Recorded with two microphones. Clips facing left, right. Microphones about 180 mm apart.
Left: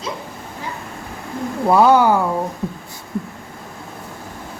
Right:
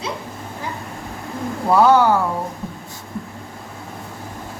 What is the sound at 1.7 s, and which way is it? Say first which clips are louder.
Speech: left 1 dB; 10° left (ahead or behind).